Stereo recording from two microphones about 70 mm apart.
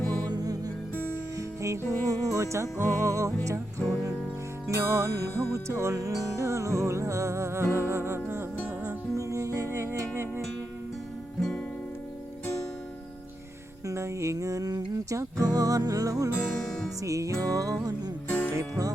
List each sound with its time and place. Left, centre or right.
0.3 s music: right
1.4 s music: right
4.7 s music: right
8.6 s music: right
9.1 s music: right
11.3 s music: centre
13.8 s music: right
15.1 s music: right
16.5 s music: centre
17.0 s music: right
18.3 s music: left
18.5 s music: right